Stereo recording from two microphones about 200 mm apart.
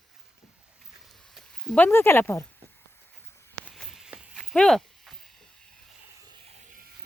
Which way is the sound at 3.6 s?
Centre (ahead or behind).